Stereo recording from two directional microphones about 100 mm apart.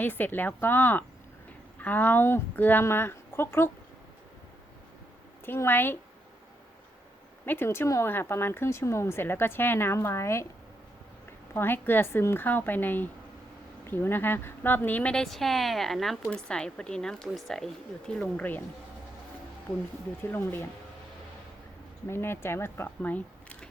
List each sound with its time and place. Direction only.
0.0 s speech: 20° left (ahead or behind)
5.5 s speech: 20° left (ahead or behind)
7.4 s speech: 20° left (ahead or behind)
15.1 s a woman's voice: 5° left (ahead or behind)
20.3 s speech: 20° left (ahead or behind)
22.0 s speech: 25° left (ahead or behind)